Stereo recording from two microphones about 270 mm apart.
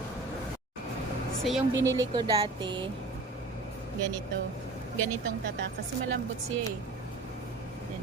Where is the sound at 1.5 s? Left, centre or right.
Centre.